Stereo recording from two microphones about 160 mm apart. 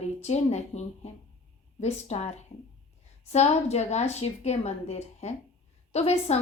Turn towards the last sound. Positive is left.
turn(degrees=40)  # may be behind; listen again after turning